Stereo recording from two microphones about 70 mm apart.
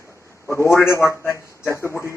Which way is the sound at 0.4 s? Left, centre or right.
Left.